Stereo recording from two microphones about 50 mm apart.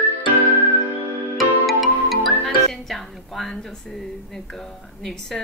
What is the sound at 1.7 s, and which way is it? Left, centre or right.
Music, centre.